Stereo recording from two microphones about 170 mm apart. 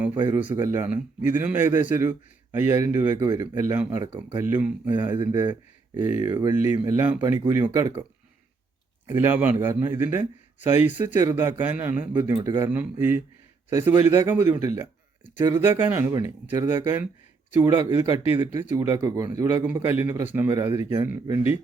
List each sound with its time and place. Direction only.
0.3 s a man's voice: 15° right (ahead or behind)
9.0 s a man's voice: 10° right (ahead or behind)